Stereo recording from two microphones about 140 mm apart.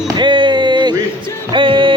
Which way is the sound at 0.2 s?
35° right (ahead or behind).